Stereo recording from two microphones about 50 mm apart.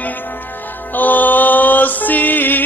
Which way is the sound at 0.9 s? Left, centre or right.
Left.